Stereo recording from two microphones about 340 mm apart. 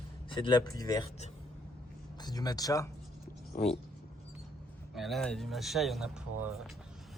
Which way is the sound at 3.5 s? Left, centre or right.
Left.